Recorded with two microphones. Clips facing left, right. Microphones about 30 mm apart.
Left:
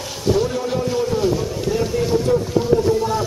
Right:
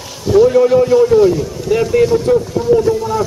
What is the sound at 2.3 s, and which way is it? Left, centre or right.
Speech, right.